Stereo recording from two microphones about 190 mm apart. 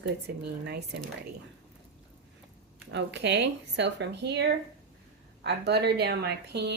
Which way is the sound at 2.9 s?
65° right (ahead or behind).